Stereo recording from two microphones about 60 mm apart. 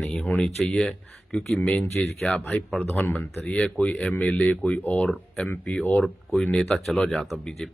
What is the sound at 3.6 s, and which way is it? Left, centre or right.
A man's voice, centre.